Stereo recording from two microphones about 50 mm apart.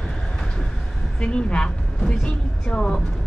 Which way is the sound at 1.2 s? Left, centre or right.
Centre.